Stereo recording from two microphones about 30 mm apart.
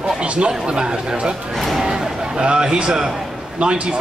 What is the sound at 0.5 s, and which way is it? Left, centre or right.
Speech, right.